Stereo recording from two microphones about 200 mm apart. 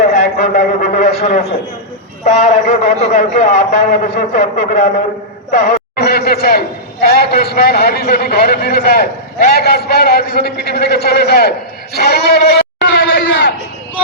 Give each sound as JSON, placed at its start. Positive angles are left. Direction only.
{"t": 0.3, "sound": "a sound", "side_deg": 45}
{"t": 2.2, "sound": "a man's voice", "side_deg": 35}
{"t": 6.0, "sound": "a man's voice", "side_deg": 50}